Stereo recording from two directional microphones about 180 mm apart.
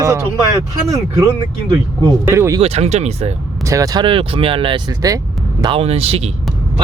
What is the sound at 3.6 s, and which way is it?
Speech, 20° right (ahead or behind).